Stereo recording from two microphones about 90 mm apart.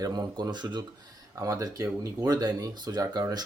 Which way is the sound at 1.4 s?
40° right (ahead or behind).